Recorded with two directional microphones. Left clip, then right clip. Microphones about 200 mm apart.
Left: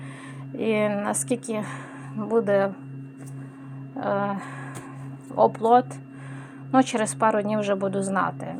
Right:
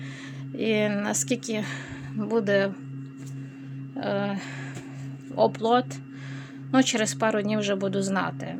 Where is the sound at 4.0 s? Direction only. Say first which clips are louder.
Left 3 dB; 10° right (ahead or behind).